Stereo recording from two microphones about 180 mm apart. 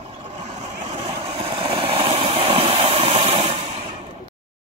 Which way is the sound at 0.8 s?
40° right (ahead or behind).